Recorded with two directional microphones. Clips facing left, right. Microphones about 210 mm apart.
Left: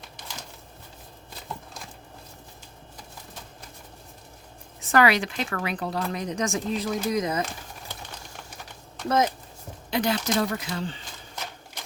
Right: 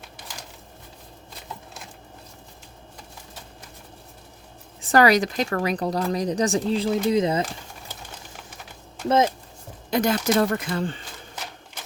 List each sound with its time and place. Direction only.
4.8 s speech: 35° right (ahead or behind)
9.0 s speech: 25° right (ahead or behind)
9.9 s speech: 50° right (ahead or behind)